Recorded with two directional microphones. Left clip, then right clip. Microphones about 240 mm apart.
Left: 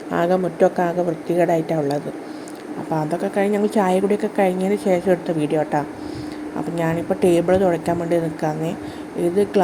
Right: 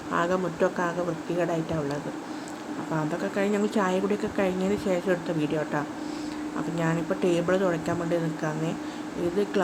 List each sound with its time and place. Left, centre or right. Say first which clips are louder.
0.1 s a woman's voice: left 7 dB; left
3.2 s a woman's voice: left 7 dB; centre